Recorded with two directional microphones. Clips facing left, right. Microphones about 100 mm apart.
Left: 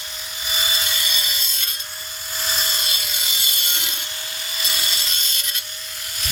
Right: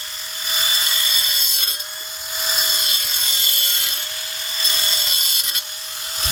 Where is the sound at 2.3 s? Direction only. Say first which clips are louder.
Even; 5° right (ahead or behind).